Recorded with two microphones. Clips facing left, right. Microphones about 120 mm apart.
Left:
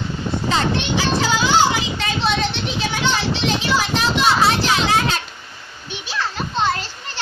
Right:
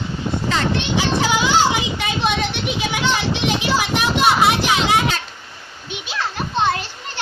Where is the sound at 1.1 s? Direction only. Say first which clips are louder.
Left 1 dB; 20° right (ahead or behind).